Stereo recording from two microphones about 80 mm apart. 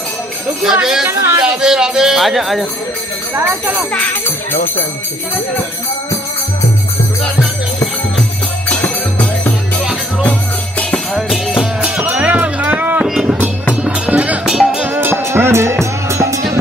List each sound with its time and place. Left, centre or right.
0.7 s speech: centre
1.0 s speech: right
1.4 s speech: centre
3.3 s speech: right
8.6 s music: centre
11.1 s music: centre
11.8 s music: centre
13.0 s music: centre
13.8 s music: centre
14.4 s music: centre
14.9 s music: right